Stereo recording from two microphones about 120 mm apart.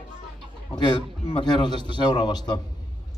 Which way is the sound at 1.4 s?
40° left (ahead or behind).